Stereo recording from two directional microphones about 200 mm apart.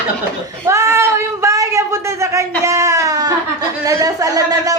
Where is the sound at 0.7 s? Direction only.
15° right (ahead or behind).